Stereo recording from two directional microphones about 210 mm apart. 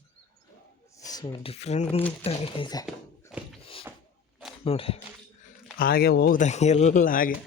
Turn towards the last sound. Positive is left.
turn(degrees=40)  # may be behind; listen again after turning